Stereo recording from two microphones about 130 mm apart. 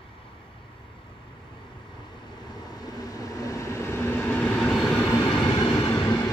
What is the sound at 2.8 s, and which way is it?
Train, 30° left (ahead or behind).